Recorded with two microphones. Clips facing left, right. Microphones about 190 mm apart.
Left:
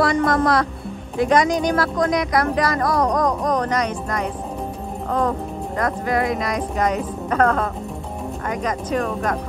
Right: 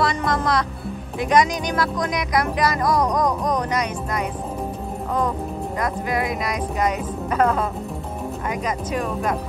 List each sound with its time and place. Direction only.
0.0 s speech: 20° right (ahead or behind)
5.8 s speech: 15° right (ahead or behind)
6.5 s speech: 35° left (ahead or behind)
7.2 s speech: 10° right (ahead or behind)